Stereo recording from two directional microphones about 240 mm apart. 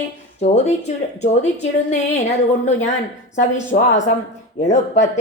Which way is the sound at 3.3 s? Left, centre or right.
Left.